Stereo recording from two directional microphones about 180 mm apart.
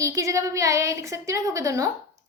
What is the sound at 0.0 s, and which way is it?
A woman's voice, 15° right (ahead or behind).